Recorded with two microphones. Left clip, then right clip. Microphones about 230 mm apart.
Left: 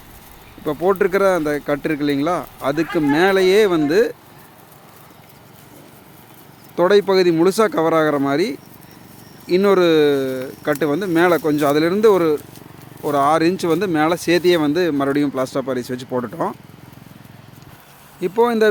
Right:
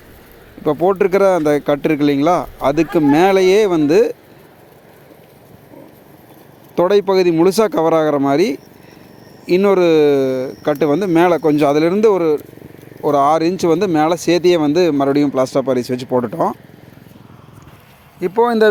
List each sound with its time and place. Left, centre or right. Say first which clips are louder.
0.6 s speech: right 3 dB; right
6.7 s speech: right 1 dB; right
18.2 s speech: right 3 dB; centre